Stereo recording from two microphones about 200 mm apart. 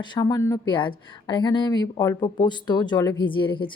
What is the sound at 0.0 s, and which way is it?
A woman's voice, 20° left (ahead or behind).